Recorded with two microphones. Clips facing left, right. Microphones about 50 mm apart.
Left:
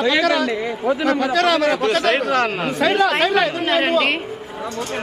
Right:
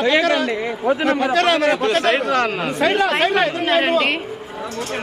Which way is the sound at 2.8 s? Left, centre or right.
Right.